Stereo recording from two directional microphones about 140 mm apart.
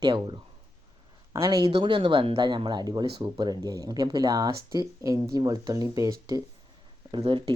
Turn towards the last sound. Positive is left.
turn(degrees=-35)  # may be behind; listen again after turning